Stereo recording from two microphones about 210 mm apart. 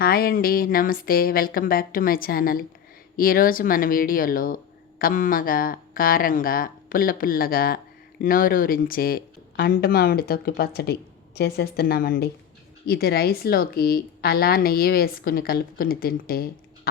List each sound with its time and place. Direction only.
0.0 s speech: 45° left (ahead or behind)